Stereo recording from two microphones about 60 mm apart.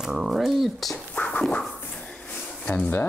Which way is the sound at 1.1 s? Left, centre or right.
Left.